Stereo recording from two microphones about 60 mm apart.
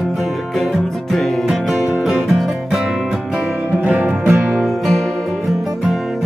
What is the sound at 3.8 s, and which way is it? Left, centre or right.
Music, right.